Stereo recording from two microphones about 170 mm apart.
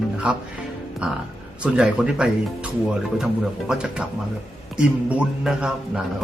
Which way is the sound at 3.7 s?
5° right (ahead or behind).